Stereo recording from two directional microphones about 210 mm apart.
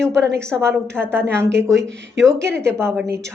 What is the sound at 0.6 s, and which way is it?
A woman's voice, 10° right (ahead or behind).